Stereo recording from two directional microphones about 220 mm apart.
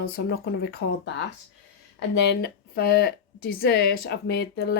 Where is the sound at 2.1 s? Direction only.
50° left (ahead or behind).